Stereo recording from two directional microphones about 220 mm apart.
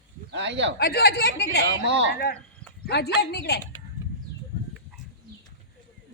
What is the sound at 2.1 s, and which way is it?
A woman's voice, 45° left (ahead or behind).